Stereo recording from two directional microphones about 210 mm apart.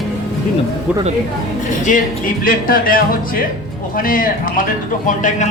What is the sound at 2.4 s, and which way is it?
Music, 40° left (ahead or behind).